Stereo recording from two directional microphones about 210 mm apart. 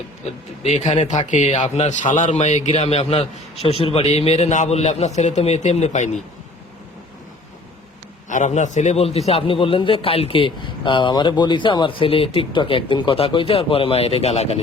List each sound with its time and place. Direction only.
0.3 s speech: 30° left (ahead or behind)
8.3 s a man's voice: 35° left (ahead or behind)